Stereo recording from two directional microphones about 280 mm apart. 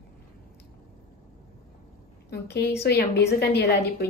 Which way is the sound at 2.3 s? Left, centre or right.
Left.